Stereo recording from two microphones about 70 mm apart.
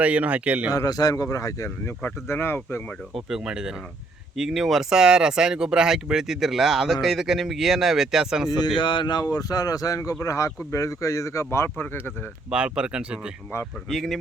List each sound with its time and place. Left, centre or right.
0.0 s speech: centre
0.7 s speech: left
2.2 s speech: left
3.2 s speech: centre
8.8 s speech: left
9.3 s speech: left
12.5 s speech: centre
13.9 s speech: centre